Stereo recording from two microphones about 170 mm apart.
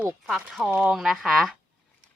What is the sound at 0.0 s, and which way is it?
A woman's voice, centre (ahead or behind).